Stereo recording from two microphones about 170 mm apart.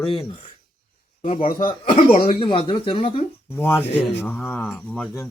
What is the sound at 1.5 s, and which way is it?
Speech, 55° left (ahead or behind).